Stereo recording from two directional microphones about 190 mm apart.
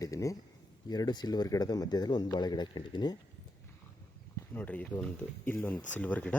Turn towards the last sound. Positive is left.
turn(degrees=10)  # may be behind; listen again after turning